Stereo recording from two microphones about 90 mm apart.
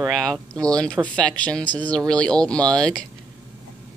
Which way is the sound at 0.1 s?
5° left (ahead or behind).